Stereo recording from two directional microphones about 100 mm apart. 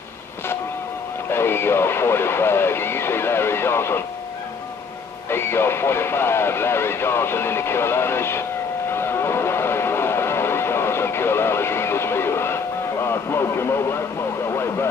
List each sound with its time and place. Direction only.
1.3 s music: 25° left (ahead or behind)
5.3 s speech: 25° left (ahead or behind)
8.9 s a sound: 25° left (ahead or behind)
13.0 s radio: 25° left (ahead or behind)
14.5 s vehicle: 25° left (ahead or behind)